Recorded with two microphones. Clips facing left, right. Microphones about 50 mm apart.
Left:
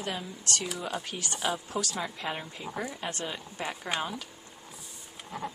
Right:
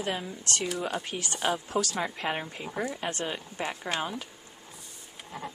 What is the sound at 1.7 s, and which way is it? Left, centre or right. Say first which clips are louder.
Speech: right 4 dB; right.